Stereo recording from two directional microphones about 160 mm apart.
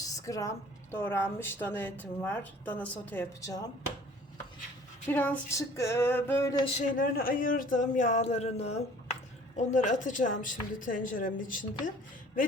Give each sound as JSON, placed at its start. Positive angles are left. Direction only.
{"t": 0.0, "sound": "a woman's voice", "side_deg": 20}
{"t": 5.0, "sound": "a woman's voice", "side_deg": 10}
{"t": 6.7, "sound": "speech", "side_deg": 60}